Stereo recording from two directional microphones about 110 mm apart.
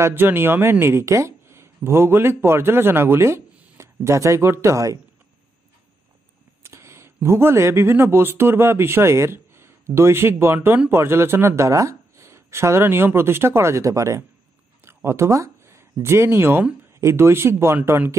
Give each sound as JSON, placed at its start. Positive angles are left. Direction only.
{"t": 0.0, "sound": "speech", "side_deg": -20}
{"t": 6.6, "sound": "a sound", "side_deg": -25}
{"t": 7.2, "sound": "speech", "side_deg": -20}